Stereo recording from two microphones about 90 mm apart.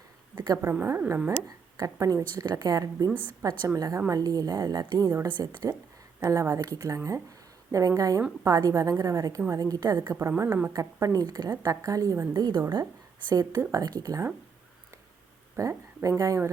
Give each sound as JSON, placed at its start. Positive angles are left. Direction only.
{"t": 0.3, "sound": "a sound", "side_deg": -50}
{"t": 0.6, "sound": "a woman's voice", "side_deg": -25}
{"t": 1.5, "sound": "a woman's voice", "side_deg": -40}
{"t": 2.3, "sound": "a woman's voice", "side_deg": -50}
{"t": 10.8, "sound": "a woman's voice", "side_deg": -40}
{"t": 15.6, "sound": "a woman's voice", "side_deg": -30}